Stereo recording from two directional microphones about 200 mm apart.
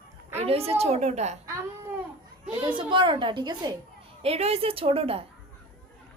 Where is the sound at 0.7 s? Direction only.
30° right (ahead or behind).